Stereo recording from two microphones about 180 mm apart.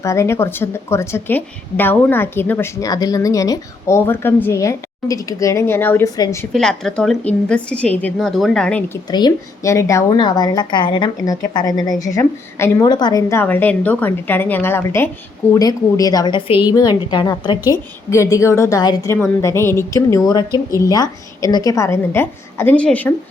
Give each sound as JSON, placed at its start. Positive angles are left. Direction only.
{"t": 0.0, "sound": "a woman's voice", "side_deg": 15}
{"t": 6.5, "sound": "a woman's voice", "side_deg": 0}
{"t": 9.0, "sound": "a woman's voice", "side_deg": 20}